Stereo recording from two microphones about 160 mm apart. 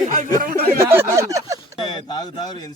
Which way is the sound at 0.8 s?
15° right (ahead or behind).